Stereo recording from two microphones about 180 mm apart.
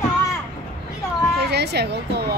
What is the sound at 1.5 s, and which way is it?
Speech, 65° right (ahead or behind).